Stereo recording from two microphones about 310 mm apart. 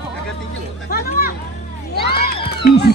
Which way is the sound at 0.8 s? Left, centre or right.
Left.